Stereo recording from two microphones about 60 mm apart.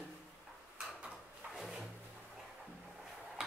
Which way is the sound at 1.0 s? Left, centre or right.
Centre.